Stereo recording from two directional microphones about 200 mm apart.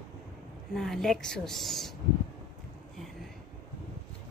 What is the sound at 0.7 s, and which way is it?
A woman's voice, centre (ahead or behind).